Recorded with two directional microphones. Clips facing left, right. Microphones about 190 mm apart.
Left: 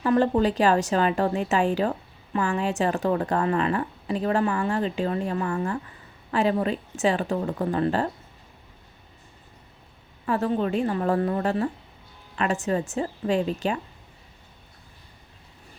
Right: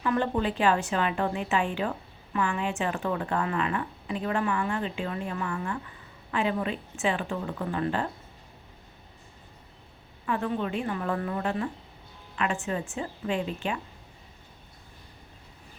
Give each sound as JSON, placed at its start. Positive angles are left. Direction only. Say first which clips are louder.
{"t": 0.0, "sound": "speech", "louder": "left 6 dB", "side_deg": 35}
{"t": 10.2, "sound": "speech", "louder": "left 5 dB", "side_deg": 35}